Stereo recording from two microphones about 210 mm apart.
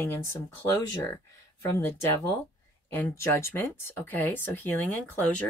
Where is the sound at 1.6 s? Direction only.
10° left (ahead or behind).